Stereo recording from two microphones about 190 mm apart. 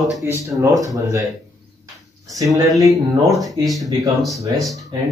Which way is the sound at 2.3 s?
15° right (ahead or behind).